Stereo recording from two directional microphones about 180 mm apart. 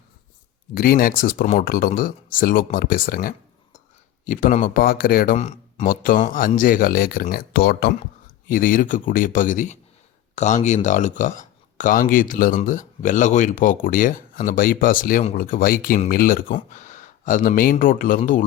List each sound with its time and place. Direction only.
0.7 s speech: 55° left (ahead or behind)
8.4 s speech: 50° left (ahead or behind)
15.2 s speech: 35° left (ahead or behind)
15.4 s speech: 50° left (ahead or behind)